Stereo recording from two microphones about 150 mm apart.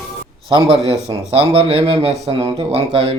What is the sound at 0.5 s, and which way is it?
Speech, 35° right (ahead or behind).